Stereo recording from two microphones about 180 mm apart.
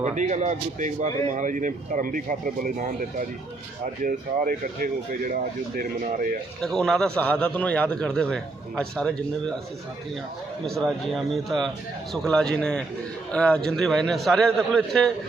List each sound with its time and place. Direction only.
0.0 s speech: 40° right (ahead or behind)
6.6 s a man's voice: 5° left (ahead or behind)
10.7 s a man's voice: centre (ahead or behind)